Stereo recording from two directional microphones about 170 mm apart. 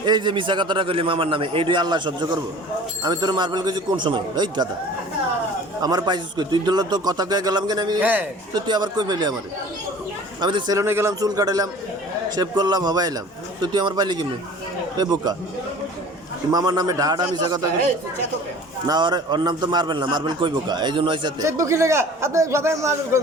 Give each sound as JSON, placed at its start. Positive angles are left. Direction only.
{"t": 0.0, "sound": "a man's voice", "side_deg": -25}
{"t": 5.8, "sound": "a man's voice", "side_deg": -20}
{"t": 8.0, "sound": "a man's voice", "side_deg": -10}
{"t": 8.5, "sound": "a man's voice", "side_deg": -25}
{"t": 10.4, "sound": "a man's voice", "side_deg": -25}
{"t": 16.5, "sound": "a man's voice", "side_deg": -25}
{"t": 18.9, "sound": "a man's voice", "side_deg": -25}
{"t": 21.4, "sound": "a man's voice", "side_deg": -15}